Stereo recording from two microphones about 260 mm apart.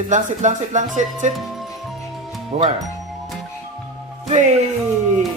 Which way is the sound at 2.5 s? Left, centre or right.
Right.